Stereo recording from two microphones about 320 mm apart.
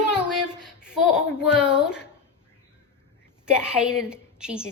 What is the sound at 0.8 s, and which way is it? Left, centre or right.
Speech, centre.